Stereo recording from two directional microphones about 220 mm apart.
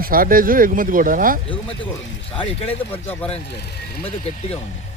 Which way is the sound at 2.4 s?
25° left (ahead or behind).